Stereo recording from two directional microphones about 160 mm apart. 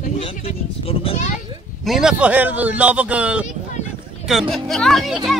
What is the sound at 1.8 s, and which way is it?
A man's voice, 5° right (ahead or behind).